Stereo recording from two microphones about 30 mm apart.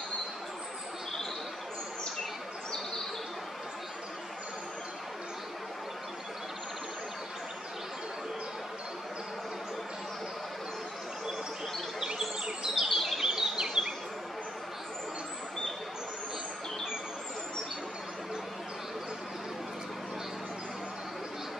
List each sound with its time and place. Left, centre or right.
12.4 s bird vocalization: centre
12.8 s chirp: centre
13.2 s bee: centre